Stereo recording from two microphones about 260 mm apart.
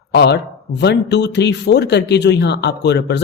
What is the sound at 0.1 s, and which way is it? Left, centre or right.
Speech, left.